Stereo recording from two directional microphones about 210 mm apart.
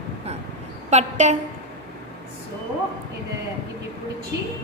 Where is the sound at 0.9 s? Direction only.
35° right (ahead or behind).